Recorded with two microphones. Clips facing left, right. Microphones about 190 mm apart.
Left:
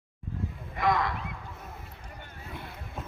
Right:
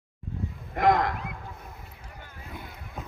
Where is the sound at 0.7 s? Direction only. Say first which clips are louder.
Right 5 dB; 45° right (ahead or behind).